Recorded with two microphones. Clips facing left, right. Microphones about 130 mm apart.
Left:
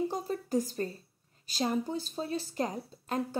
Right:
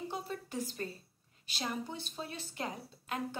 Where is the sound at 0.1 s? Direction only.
40° left (ahead or behind).